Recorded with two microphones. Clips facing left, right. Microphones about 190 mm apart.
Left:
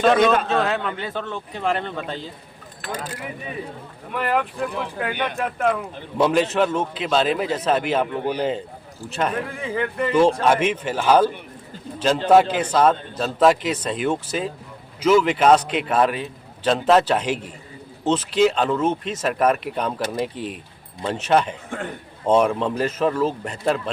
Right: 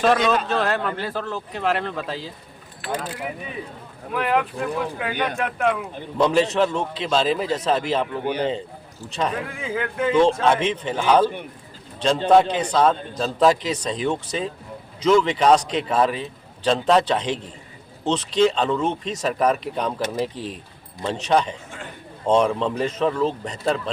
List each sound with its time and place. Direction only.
0.0 s a man's voice: centre (ahead or behind)
4.1 s a man's voice: centre (ahead or behind)
20.3 s speech: 30° right (ahead or behind)
21.0 s a man's voice: 5° left (ahead or behind)